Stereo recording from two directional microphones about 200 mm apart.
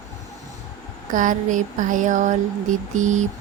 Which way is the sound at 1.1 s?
40° right (ahead or behind).